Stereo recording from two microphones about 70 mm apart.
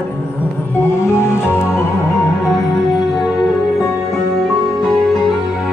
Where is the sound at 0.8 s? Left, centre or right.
Left.